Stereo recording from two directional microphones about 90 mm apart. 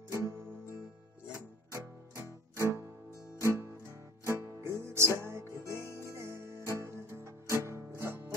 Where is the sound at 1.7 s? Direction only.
35° right (ahead or behind).